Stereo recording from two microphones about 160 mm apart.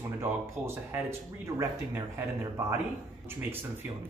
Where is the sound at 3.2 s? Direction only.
15° right (ahead or behind).